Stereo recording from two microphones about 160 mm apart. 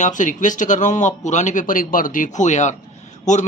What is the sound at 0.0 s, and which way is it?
Speech, 50° left (ahead or behind).